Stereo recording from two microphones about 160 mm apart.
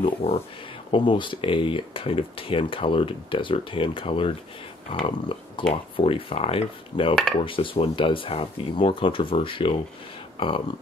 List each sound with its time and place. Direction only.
0.0 s speech: 40° left (ahead or behind)